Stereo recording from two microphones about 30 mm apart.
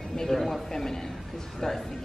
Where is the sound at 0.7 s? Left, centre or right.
Centre.